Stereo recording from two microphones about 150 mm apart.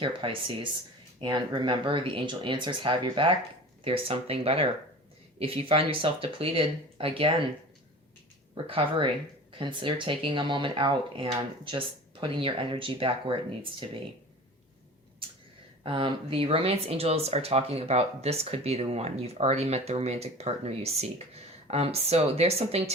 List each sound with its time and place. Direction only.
0.0 s speech: 35° right (ahead or behind)
8.6 s speech: 35° right (ahead or behind)
15.8 s speech: 35° right (ahead or behind)